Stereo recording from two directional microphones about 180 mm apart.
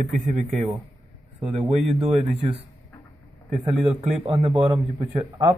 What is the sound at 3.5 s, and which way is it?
A man's voice, 30° right (ahead or behind).